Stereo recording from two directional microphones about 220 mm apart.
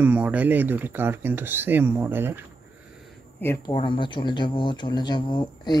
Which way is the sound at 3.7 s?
20° left (ahead or behind).